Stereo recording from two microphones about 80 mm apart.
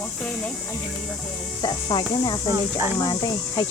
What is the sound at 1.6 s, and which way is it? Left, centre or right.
Speech, left.